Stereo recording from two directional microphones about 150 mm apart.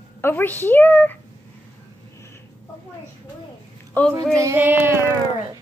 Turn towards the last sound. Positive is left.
turn(degrees=-15)  # may be behind; listen again after turning